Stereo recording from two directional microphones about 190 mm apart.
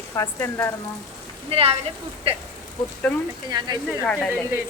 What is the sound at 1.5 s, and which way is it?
Speech, 30° right (ahead or behind).